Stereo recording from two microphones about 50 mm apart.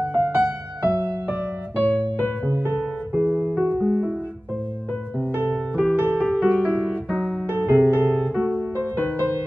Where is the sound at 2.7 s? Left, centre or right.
Right.